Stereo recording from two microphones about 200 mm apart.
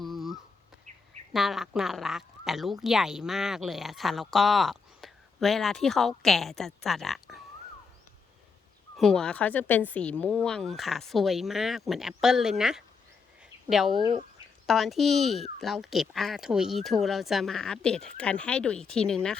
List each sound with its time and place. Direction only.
0.0 s a sound: centre (ahead or behind)
0.9 s duck: 35° right (ahead or behind)
1.3 s speech: centre (ahead or behind)
9.0 s speech: centre (ahead or behind)
13.4 s a sound: centre (ahead or behind)
14.0 s speech: 25° right (ahead or behind)
14.7 s speech: centre (ahead or behind)